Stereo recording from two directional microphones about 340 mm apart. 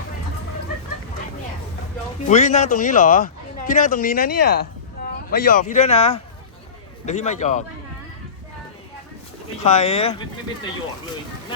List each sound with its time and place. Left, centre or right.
2.2 s speech: left
9.6 s speech: centre